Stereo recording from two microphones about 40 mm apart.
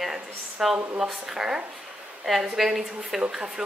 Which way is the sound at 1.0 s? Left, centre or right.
Centre.